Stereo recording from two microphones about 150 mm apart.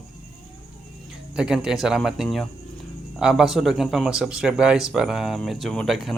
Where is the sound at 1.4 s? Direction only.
5° right (ahead or behind).